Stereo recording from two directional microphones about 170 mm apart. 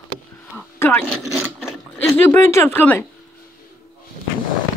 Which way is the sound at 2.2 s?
15° left (ahead or behind).